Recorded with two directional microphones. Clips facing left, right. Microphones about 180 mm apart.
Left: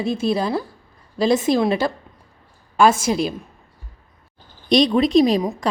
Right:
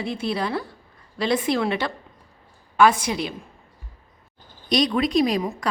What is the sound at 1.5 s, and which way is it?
Speech, 35° left (ahead or behind).